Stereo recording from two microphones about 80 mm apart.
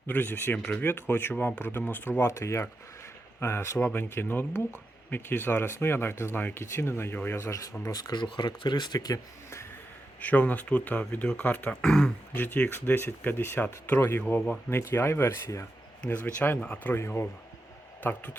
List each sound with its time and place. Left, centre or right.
0.1 s speech: left
2.2 s speech: left
10.2 s speech: centre
11.7 s speech: centre
12.3 s speech: left
14.7 s speech: left
16.0 s speech: left
16.9 s speech: left